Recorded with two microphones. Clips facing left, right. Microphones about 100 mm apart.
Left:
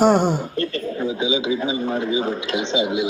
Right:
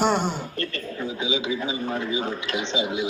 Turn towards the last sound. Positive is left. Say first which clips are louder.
# left 5 dB
turn(degrees=20)  # may be behind; listen again after turning